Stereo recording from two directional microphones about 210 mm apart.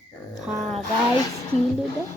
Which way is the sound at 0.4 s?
Centre (ahead or behind).